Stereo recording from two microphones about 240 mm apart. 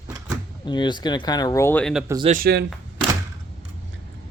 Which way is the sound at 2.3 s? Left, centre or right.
Right.